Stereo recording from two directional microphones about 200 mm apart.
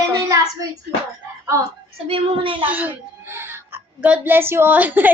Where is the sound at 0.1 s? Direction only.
15° right (ahead or behind).